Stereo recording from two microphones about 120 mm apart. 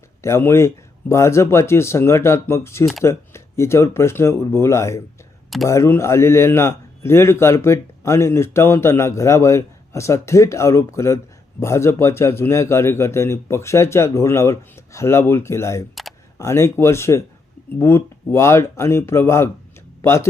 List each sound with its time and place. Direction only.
0.2 s a man's voice: 20° left (ahead or behind)